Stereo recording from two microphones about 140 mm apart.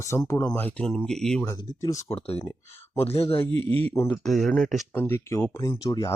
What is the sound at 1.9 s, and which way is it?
Speech, 45° left (ahead or behind).